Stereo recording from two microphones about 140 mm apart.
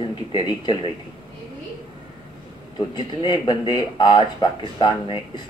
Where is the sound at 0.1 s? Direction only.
35° left (ahead or behind).